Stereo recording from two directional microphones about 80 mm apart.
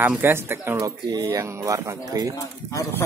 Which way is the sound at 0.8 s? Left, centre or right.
Right.